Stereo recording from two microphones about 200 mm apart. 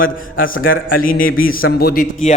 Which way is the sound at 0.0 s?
45° left (ahead or behind).